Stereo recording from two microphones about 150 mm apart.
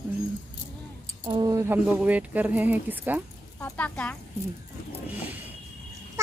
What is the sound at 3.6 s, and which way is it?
Speech, 10° left (ahead or behind).